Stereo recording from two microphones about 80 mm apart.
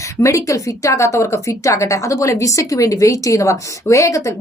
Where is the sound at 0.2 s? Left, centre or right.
Left.